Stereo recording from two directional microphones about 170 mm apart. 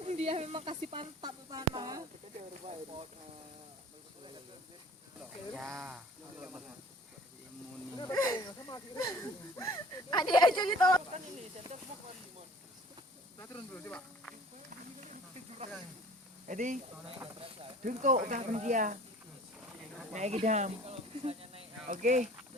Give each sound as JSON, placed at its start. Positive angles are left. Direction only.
{"t": 0.0, "sound": "a woman's voice", "side_deg": -40}
{"t": 2.5, "sound": "speech", "side_deg": -40}
{"t": 5.5, "sound": "speech", "side_deg": -5}
{"t": 7.9, "sound": "speech", "side_deg": 20}
{"t": 13.4, "sound": "speech", "side_deg": 15}
{"t": 15.1, "sound": "snake", "side_deg": -40}
{"t": 16.5, "sound": "speech", "side_deg": -50}
{"t": 17.2, "sound": "speech", "side_deg": -35}
{"t": 17.8, "sound": "speech", "side_deg": -50}
{"t": 20.1, "sound": "speech", "side_deg": -45}